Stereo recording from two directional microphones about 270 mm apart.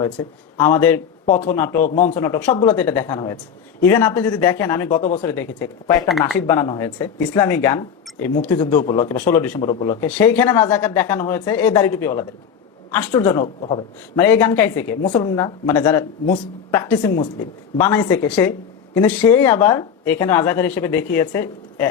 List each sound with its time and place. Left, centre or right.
0.0 s speech: centre
1.3 s a man's voice: left
1.5 s speech: centre
1.8 s a man's voice: left
2.2 s speech: centre
5.0 s a man's voice: left
5.3 s a man's voice: centre
14.2 s speech: centre